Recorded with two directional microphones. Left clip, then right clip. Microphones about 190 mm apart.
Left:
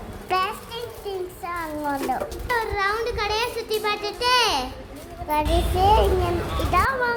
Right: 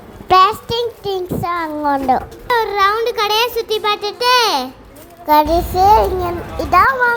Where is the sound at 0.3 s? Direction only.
35° right (ahead or behind).